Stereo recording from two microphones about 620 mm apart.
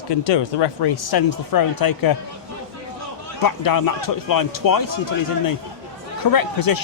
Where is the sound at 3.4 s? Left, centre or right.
Left.